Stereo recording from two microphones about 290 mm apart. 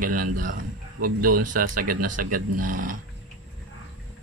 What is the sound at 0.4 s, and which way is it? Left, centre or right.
Speech, right.